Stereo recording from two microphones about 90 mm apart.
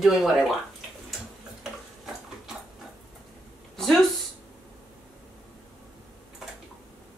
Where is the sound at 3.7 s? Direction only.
Centre (ahead or behind).